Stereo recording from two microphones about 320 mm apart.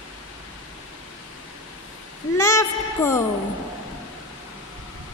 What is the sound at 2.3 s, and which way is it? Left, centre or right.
Speech, centre.